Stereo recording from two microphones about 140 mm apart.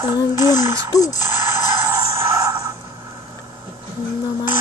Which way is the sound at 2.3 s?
25° right (ahead or behind).